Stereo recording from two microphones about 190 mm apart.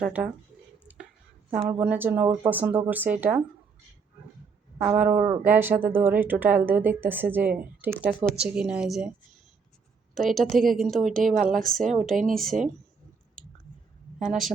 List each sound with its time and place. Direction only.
0.0 s speech: 10° right (ahead or behind)
1.6 s speech: 10° right (ahead or behind)
4.8 s speech: 10° right (ahead or behind)
10.2 s a woman's voice: centre (ahead or behind)
11.3 s speech: 45° right (ahead or behind)
11.9 s a woman's voice: centre (ahead or behind)
14.2 s a woman's voice: centre (ahead or behind)